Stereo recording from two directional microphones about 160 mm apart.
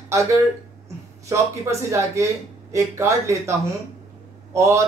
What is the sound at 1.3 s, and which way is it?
Speech, 20° right (ahead or behind).